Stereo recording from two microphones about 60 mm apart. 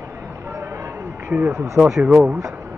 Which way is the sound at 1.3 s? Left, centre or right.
Right.